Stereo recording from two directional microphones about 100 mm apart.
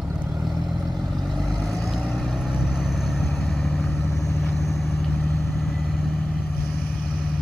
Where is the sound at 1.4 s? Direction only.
Centre (ahead or behind).